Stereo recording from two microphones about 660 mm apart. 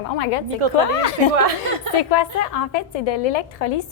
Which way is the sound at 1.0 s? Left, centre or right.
Left.